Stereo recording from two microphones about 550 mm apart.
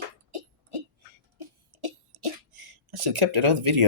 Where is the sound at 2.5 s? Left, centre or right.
Right.